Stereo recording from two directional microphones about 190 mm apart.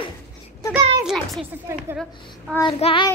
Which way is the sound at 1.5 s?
10° right (ahead or behind).